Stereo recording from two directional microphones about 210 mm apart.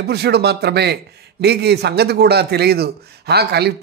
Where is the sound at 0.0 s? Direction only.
50° right (ahead or behind).